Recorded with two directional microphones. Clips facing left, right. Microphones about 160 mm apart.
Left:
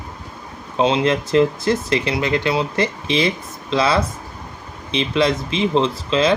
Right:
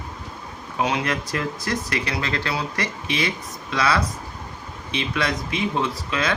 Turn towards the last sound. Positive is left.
turn(degrees=25)  # may be behind; listen again after turning